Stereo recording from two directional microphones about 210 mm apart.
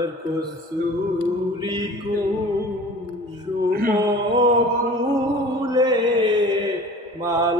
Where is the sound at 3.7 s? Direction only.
45° right (ahead or behind).